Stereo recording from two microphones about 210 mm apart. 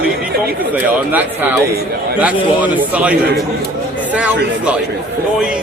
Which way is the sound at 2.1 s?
5° right (ahead or behind).